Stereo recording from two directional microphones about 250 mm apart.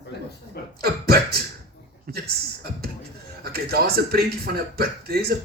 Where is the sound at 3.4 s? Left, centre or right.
Right.